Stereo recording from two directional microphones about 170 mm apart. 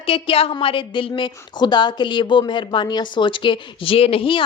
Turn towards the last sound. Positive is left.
turn(degrees=30)  # may be behind; listen again after turning